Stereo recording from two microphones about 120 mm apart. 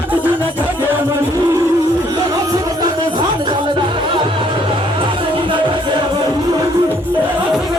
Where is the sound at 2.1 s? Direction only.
30° right (ahead or behind).